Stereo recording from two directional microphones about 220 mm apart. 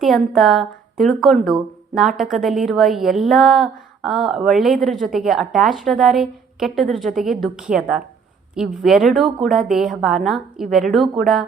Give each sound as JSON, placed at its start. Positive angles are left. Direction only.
{"t": 0.0, "sound": "a woman's voice", "side_deg": 0}